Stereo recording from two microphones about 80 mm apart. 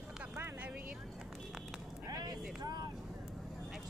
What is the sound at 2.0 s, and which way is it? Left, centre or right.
Vehicle, right.